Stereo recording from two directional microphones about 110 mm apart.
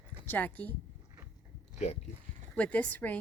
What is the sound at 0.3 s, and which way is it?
Speech, 15° left (ahead or behind).